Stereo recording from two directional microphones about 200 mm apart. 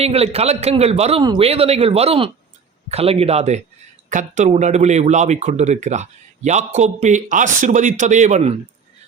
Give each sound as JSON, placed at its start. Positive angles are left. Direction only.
{"t": 0.0, "sound": "speech", "side_deg": -30}